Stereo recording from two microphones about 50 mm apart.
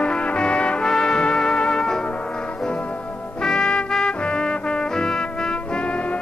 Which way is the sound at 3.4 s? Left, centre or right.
Centre.